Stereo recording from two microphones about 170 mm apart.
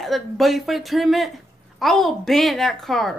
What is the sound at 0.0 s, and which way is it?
Speech, centre (ahead or behind).